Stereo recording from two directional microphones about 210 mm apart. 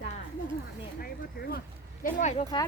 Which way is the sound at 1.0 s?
45° left (ahead or behind).